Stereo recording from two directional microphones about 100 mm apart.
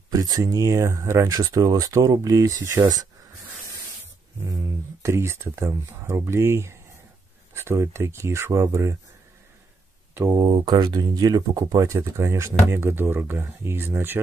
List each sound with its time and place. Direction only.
0.1 s speech: 35° right (ahead or behind)
4.5 s speech: 30° right (ahead or behind)
10.3 s speech: 50° right (ahead or behind); by 14.2 s 20° right (ahead or behind)